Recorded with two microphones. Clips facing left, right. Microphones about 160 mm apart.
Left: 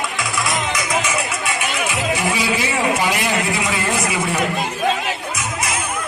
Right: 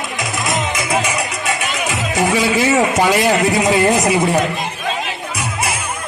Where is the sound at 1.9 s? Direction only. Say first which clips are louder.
Right 6 dB; 40° right (ahead or behind).